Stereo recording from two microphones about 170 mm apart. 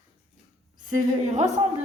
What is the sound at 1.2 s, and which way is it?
Speech, 45° right (ahead or behind).